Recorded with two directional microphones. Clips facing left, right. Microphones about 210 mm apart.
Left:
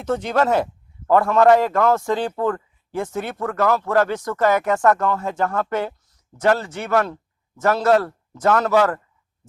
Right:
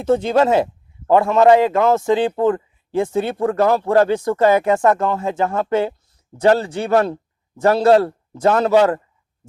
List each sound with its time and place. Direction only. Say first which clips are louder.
0.0 s a man's voice: right 5 dB; 25° right (ahead or behind)